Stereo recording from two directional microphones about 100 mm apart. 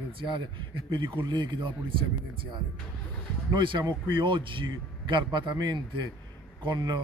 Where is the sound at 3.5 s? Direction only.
50° right (ahead or behind).